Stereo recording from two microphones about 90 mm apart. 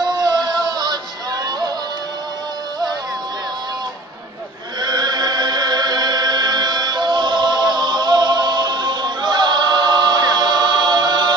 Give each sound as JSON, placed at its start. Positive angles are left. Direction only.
{"t": 0.0, "sound": "music", "side_deg": -50}
{"t": 4.7, "sound": "chant", "side_deg": -50}